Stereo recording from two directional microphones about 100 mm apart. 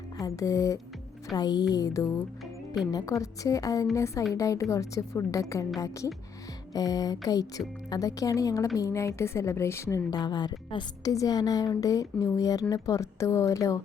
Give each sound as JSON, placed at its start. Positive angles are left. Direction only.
{"t": 0.2, "sound": "a woman's voice", "side_deg": 30}
{"t": 1.4, "sound": "a woman's voice", "side_deg": 45}
{"t": 6.7, "sound": "a woman's voice", "side_deg": 40}
{"t": 10.1, "sound": "a woman's voice", "side_deg": 45}
{"t": 11.0, "sound": "a woman's voice", "side_deg": 35}